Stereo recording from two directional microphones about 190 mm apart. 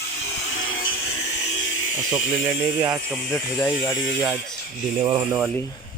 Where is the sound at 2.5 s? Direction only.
15° right (ahead or behind).